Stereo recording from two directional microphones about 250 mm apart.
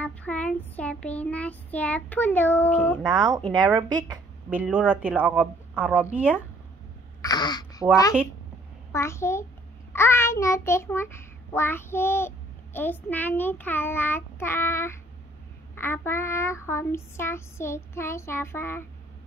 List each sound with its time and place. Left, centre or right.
0.0 s child singing: centre
3.5 s child singing: centre
7.2 s a sound: centre
8.9 s a child's voice: centre